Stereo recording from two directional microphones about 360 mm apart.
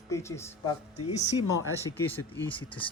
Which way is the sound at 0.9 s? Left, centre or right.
Centre.